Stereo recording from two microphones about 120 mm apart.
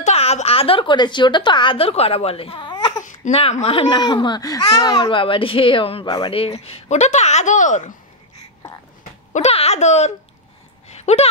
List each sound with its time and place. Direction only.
0.0 s a woman's voice: 60° left (ahead or behind)
3.9 s speech: 40° left (ahead or behind)
6.0 s speech: 35° left (ahead or behind)
6.3 s speech: 50° left (ahead or behind); by 7.9 s 90° left
9.3 s speech: 60° left (ahead or behind)
11.0 s a sound: 65° left (ahead or behind)